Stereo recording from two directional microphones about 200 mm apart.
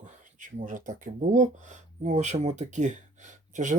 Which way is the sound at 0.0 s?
40° right (ahead or behind).